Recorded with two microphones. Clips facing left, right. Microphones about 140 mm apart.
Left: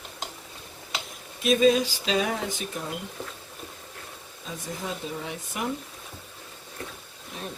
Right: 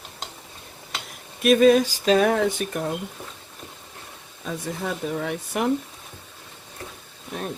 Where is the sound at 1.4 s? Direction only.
60° right (ahead or behind).